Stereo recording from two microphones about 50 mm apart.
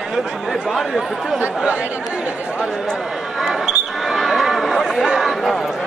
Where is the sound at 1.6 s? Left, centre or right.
Right.